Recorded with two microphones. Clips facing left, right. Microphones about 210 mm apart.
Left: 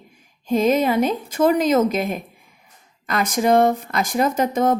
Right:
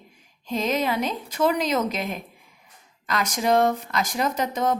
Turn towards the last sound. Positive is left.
turn(degrees=50)  # may be behind; listen again after turning